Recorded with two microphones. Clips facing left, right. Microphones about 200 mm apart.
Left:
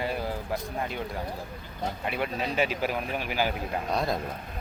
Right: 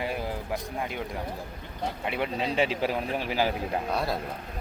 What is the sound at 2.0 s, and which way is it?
Speech, 20° right (ahead or behind).